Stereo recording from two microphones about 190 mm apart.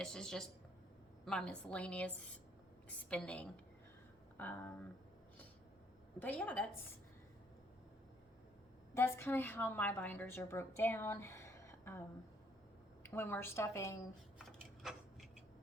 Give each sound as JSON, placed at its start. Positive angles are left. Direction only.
{"t": 0.0, "sound": "a woman's voice", "side_deg": 5}
{"t": 6.1, "sound": "a woman's voice", "side_deg": 10}
{"t": 9.0, "sound": "a woman's voice", "side_deg": 10}
{"t": 14.3, "sound": "a sound", "side_deg": 0}